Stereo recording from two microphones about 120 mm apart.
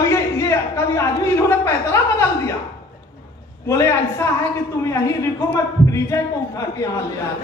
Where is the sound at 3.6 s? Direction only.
25° left (ahead or behind).